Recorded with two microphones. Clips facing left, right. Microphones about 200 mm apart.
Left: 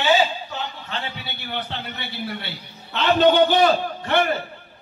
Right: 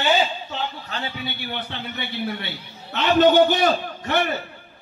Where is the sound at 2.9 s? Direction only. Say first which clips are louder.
Right 1 dB; 50° right (ahead or behind).